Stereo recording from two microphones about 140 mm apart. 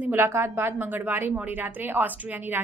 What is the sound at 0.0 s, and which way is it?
A woman's voice, 15° right (ahead or behind).